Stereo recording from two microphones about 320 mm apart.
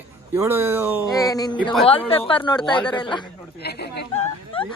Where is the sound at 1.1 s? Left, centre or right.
Centre.